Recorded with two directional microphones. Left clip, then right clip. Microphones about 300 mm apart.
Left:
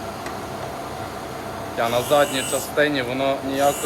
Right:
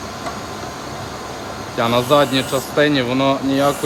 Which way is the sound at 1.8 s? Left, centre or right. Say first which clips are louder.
Right 4 dB; right.